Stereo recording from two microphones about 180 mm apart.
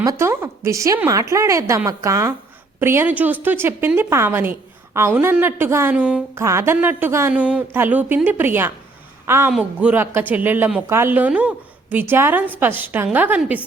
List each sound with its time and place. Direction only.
0.0 s speech: 15° right (ahead or behind)